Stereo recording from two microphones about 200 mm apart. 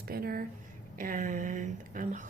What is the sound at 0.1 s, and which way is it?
A woman's voice, 50° right (ahead or behind).